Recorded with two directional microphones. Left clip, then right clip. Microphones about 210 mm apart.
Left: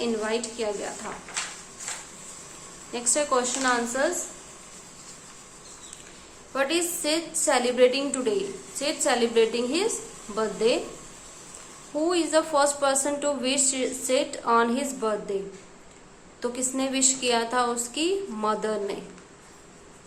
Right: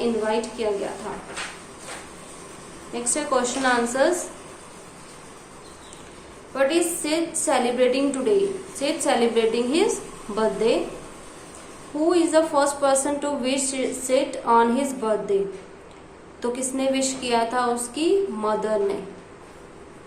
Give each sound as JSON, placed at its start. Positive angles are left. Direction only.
{"t": 0.0, "sound": "a woman's voice", "side_deg": 25}
{"t": 2.9, "sound": "a woman's voice", "side_deg": 25}
{"t": 6.5, "sound": "a woman's voice", "side_deg": 25}
{"t": 12.0, "sound": "a woman's voice", "side_deg": 20}
{"t": 16.4, "sound": "a woman's voice", "side_deg": 20}